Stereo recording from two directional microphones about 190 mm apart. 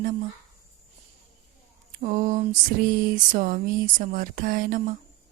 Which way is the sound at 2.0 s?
40° right (ahead or behind).